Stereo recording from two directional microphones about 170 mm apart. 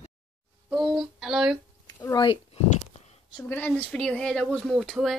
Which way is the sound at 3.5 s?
10° left (ahead or behind).